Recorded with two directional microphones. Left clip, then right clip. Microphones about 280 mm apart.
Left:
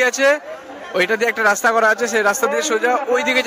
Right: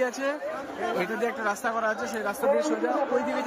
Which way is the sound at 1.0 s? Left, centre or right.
Left.